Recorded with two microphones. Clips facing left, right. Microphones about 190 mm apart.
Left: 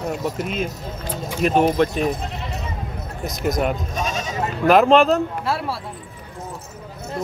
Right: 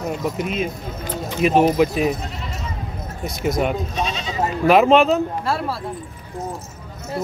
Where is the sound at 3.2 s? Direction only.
Centre (ahead or behind).